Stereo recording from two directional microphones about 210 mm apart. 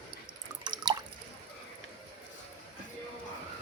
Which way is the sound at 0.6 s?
20° right (ahead or behind).